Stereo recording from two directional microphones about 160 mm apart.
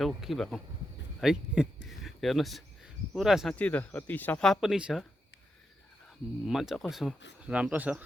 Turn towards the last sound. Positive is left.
turn(degrees=-10)  # may be behind; listen again after turning